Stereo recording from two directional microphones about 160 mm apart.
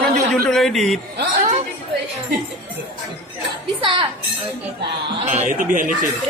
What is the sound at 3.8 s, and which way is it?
Speech, 30° right (ahead or behind).